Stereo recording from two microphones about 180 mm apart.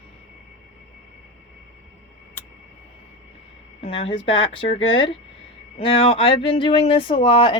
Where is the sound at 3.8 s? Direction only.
30° left (ahead or behind).